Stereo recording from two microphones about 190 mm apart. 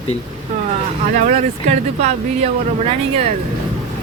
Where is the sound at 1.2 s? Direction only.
40° right (ahead or behind).